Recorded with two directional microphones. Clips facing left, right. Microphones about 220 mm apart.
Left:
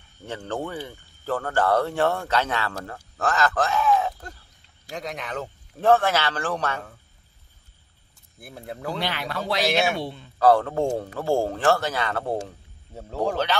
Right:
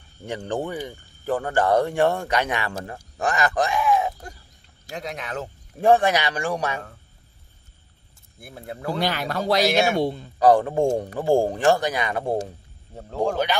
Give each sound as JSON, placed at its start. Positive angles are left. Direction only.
{"t": 0.3, "sound": "speech", "side_deg": -15}
{"t": 3.2, "sound": "a sound", "side_deg": -15}
{"t": 4.9, "sound": "speech", "side_deg": 0}
{"t": 5.8, "sound": "speech", "side_deg": -15}
{"t": 8.4, "sound": "speech", "side_deg": 0}
{"t": 8.9, "sound": "speech", "side_deg": -40}
{"t": 9.7, "sound": "speech", "side_deg": 0}
{"t": 9.9, "sound": "speech", "side_deg": -40}
{"t": 10.4, "sound": "speech", "side_deg": -15}
{"t": 12.9, "sound": "speech", "side_deg": 5}